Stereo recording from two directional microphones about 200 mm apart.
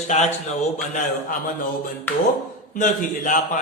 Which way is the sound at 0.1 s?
35° left (ahead or behind).